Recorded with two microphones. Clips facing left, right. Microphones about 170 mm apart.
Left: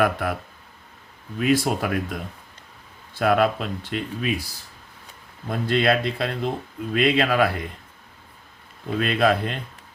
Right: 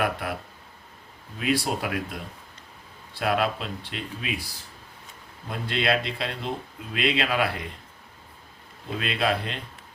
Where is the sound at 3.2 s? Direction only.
50° left (ahead or behind).